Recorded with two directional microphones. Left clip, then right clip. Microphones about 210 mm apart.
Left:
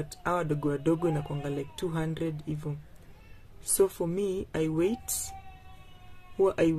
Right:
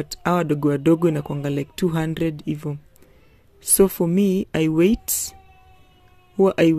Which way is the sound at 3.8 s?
40° right (ahead or behind).